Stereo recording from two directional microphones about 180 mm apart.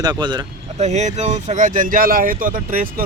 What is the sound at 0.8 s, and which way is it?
Speech, 40° right (ahead or behind).